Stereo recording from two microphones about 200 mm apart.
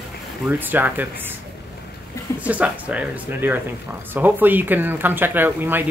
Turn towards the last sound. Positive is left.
turn(degrees=-10)  # may be behind; listen again after turning